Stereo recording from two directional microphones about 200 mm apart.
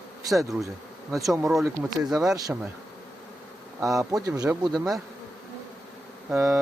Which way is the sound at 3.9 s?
15° right (ahead or behind).